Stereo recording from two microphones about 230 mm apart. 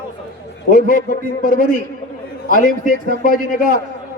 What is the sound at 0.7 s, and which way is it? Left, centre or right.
A man's voice, left.